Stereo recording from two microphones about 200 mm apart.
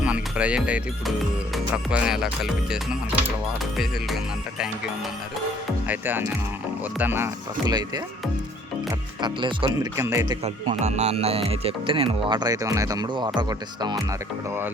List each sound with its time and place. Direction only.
0.0 s speech: 5° right (ahead or behind)
5.9 s speech: 10° right (ahead or behind)
9.2 s speech: 25° right (ahead or behind)
10.4 s speech: 35° right (ahead or behind)